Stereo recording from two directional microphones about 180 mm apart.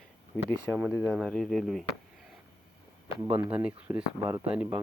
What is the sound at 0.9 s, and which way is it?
Speech, 10° left (ahead or behind).